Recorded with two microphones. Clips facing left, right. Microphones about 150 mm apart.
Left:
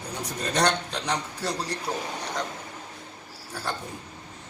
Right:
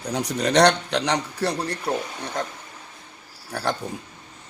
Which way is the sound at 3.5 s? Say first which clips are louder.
Right 7 dB; 70° right (ahead or behind).